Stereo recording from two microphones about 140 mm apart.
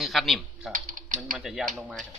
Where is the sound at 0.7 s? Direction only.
70° right (ahead or behind).